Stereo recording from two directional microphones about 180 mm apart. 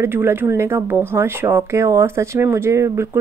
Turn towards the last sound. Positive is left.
turn(degrees=-15)  # may be behind; listen again after turning